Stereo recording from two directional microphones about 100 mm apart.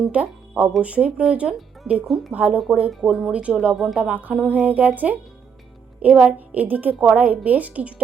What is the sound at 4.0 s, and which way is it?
Speech, 15° right (ahead or behind).